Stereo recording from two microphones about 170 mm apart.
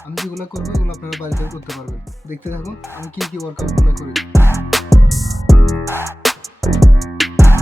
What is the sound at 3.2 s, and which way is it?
Music, centre (ahead or behind).